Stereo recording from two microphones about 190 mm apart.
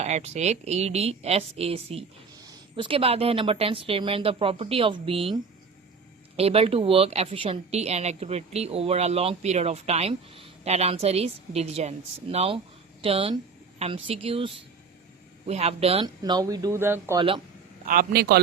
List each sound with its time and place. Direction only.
0.0 s a woman's voice: 35° right (ahead or behind); by 17.2 s 10° right (ahead or behind)
17.2 s a woman's voice: 25° right (ahead or behind)
17.8 s a man's voice: 50° right (ahead or behind)